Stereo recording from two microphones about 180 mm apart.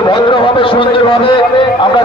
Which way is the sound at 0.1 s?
30° left (ahead or behind).